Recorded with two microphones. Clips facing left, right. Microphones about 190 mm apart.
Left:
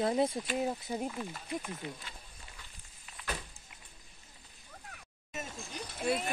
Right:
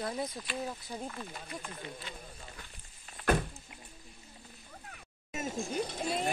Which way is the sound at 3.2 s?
55° right (ahead or behind).